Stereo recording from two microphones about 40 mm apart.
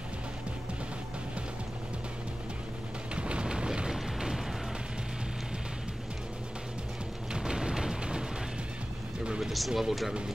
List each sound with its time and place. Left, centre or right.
3.2 s a sound: right
3.9 s music: centre
7.3 s music: centre
9.4 s speech: centre